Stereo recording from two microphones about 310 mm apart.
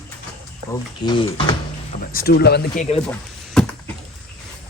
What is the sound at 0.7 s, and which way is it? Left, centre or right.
Speech, centre.